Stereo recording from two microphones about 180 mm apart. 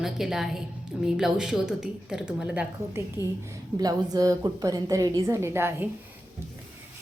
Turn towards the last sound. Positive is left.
turn(degrees=-10)  # may be behind; listen again after turning